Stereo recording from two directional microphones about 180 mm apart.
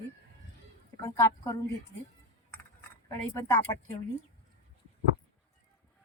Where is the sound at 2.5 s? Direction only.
10° left (ahead or behind).